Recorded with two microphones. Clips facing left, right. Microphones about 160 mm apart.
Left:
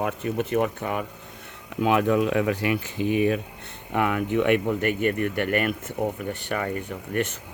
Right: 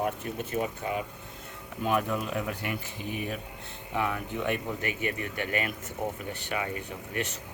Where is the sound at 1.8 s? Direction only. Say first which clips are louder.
Left 8 dB; 90° left.